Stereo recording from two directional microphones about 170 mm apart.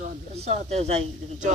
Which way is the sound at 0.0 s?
40° right (ahead or behind).